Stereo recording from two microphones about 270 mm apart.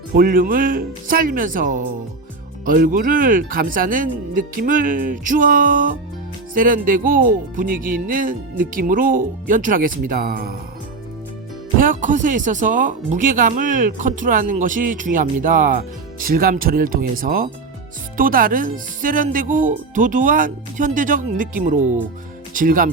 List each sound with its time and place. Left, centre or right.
0.1 s speech: right
11.8 s speech: right